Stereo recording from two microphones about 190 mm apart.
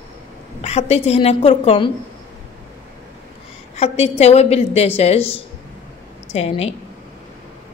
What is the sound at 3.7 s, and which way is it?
A woman's voice, 35° left (ahead or behind).